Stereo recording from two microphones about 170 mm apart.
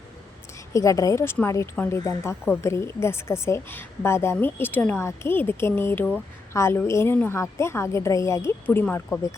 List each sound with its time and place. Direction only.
0.7 s a woman's voice: 20° left (ahead or behind)